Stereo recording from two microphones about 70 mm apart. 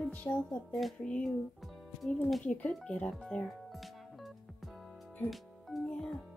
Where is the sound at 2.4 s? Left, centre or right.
Centre.